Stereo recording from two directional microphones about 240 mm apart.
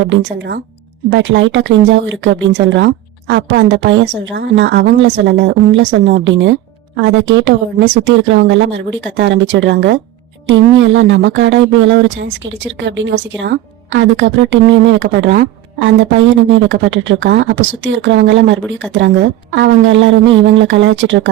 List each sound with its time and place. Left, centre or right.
0.1 s a woman's voice: right